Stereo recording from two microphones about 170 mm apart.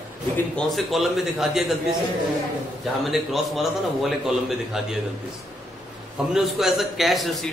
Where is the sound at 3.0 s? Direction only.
Centre (ahead or behind).